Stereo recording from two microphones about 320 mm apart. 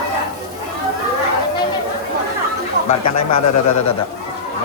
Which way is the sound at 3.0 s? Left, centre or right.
Left.